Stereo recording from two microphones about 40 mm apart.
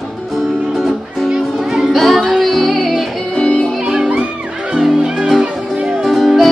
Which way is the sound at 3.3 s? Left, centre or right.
Left.